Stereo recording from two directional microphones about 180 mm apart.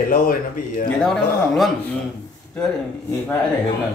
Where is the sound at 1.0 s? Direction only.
5° left (ahead or behind).